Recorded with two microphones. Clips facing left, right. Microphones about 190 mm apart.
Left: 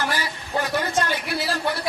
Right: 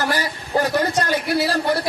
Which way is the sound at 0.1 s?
40° right (ahead or behind).